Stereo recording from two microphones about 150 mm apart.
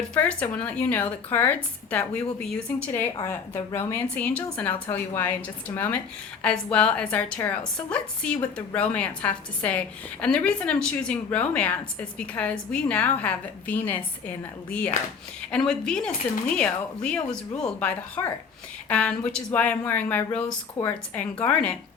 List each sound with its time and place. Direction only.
0.1 s a woman's voice: 10° left (ahead or behind)